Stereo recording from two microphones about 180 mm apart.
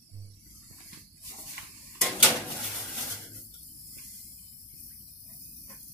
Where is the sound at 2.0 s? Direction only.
Centre (ahead or behind).